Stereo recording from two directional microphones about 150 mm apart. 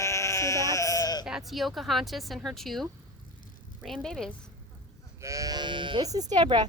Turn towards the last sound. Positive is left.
turn(degrees=-30)  # may be behind; listen again after turning